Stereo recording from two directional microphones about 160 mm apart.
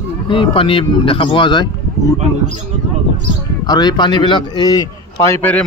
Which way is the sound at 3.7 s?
25° left (ahead or behind).